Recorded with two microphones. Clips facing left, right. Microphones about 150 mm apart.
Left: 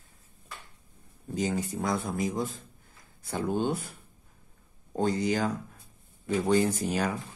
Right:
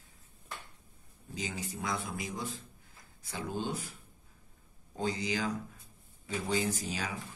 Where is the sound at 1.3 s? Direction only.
50° left (ahead or behind).